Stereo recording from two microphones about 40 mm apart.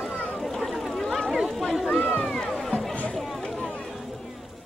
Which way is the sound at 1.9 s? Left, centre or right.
Left.